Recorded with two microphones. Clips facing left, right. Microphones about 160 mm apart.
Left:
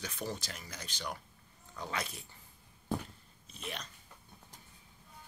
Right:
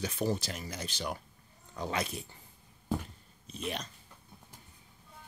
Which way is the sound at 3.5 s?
20° right (ahead or behind).